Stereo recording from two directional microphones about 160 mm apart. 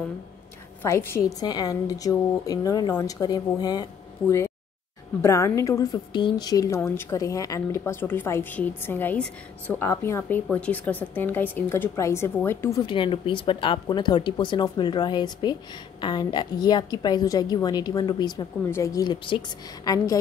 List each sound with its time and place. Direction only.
0.8 s a woman's voice: 15° left (ahead or behind)
12.8 s a woman's voice: 30° left (ahead or behind)